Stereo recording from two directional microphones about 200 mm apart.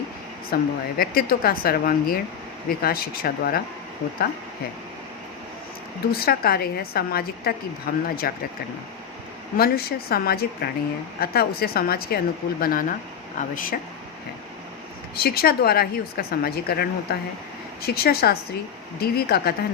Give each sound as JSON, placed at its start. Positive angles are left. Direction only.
{"t": 0.5, "sound": "speech", "side_deg": 50}
{"t": 6.1, "sound": "speech", "side_deg": 50}
{"t": 9.6, "sound": "speech", "side_deg": 50}
{"t": 15.1, "sound": "speech", "side_deg": 50}